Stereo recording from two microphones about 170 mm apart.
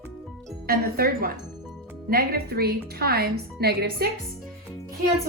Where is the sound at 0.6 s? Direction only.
65° right (ahead or behind).